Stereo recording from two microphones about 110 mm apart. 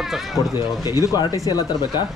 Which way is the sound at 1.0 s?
30° left (ahead or behind).